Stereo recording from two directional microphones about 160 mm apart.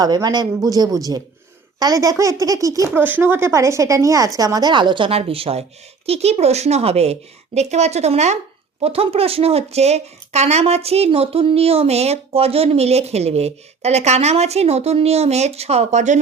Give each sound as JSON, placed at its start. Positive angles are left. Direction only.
{"t": 0.0, "sound": "a woman's voice", "side_deg": -25}